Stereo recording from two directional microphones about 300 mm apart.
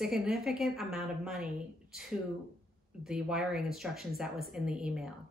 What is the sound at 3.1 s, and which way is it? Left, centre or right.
Speech, centre.